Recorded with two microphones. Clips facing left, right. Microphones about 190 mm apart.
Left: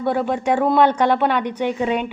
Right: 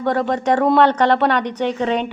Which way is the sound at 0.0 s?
10° left (ahead or behind).